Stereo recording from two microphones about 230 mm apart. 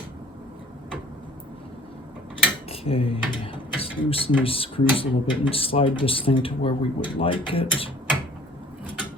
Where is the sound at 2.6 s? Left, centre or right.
Left.